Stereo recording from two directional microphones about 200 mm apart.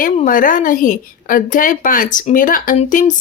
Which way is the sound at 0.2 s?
40° left (ahead or behind).